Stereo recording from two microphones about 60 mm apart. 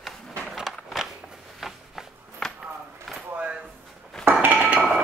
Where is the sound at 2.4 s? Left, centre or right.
Centre.